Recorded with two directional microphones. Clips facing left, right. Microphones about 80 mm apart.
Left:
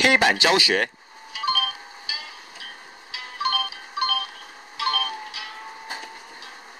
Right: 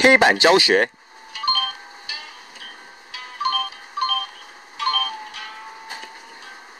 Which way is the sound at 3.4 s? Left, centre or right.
Centre.